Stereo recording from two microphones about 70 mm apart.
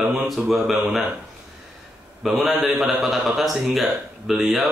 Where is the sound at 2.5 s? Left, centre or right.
Centre.